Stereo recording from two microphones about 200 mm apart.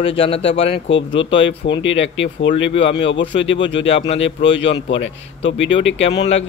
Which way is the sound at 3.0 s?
65° left (ahead or behind).